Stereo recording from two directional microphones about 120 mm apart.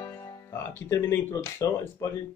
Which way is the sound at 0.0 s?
20° left (ahead or behind).